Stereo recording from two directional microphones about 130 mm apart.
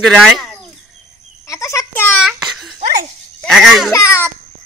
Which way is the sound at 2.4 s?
Centre (ahead or behind).